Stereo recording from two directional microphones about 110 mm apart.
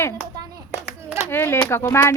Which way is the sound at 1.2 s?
20° left (ahead or behind).